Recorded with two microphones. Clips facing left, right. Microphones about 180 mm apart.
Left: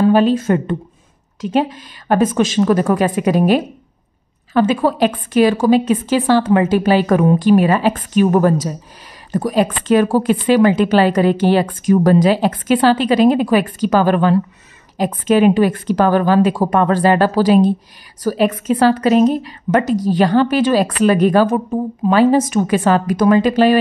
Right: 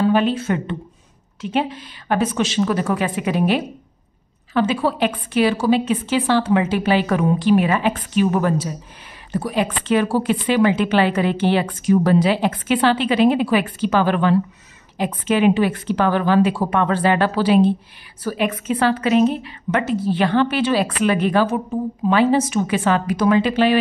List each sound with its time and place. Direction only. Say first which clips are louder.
0.1 s a woman's voice: left 5 dB; 40° left (ahead or behind)